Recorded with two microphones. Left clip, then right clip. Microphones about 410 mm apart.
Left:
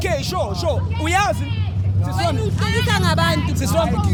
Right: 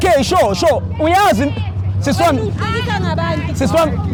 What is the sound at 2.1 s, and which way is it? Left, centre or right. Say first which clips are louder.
Speech: right 9 dB; right.